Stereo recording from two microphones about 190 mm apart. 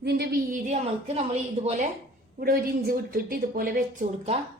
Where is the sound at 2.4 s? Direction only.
50° right (ahead or behind).